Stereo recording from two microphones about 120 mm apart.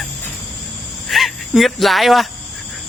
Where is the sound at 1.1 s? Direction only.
Centre (ahead or behind).